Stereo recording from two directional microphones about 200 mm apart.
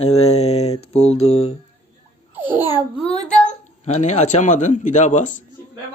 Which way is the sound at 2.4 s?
10° right (ahead or behind).